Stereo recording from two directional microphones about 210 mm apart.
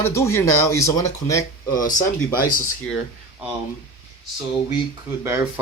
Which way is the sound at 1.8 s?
40° left (ahead or behind).